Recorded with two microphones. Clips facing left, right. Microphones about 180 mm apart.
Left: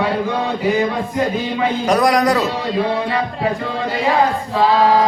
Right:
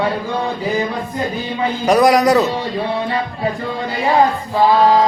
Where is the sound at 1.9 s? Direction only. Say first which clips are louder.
Right 4 dB; centre (ahead or behind).